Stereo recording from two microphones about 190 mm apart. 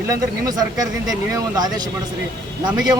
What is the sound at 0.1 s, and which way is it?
Speech, 20° right (ahead or behind).